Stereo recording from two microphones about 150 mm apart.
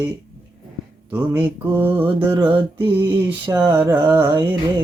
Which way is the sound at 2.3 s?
30° right (ahead or behind).